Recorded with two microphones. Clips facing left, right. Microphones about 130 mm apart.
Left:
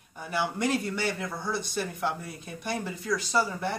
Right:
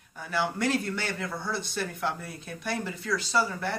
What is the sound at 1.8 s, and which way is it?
Speech, 5° left (ahead or behind).